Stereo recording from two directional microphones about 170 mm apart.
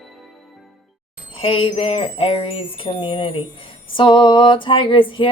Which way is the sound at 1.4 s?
30° left (ahead or behind).